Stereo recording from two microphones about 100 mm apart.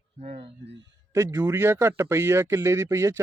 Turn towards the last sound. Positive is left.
turn(degrees=-30)  # may be behind; listen again after turning